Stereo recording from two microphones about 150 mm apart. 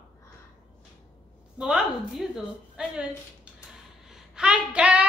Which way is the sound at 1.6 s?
5° right (ahead or behind).